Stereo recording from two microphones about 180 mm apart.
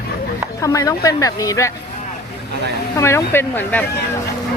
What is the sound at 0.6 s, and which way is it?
A woman's voice, 20° left (ahead or behind).